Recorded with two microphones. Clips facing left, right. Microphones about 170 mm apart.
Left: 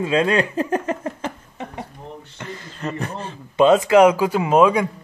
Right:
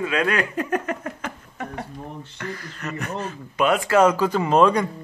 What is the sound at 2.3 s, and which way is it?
Speech, 20° left (ahead or behind).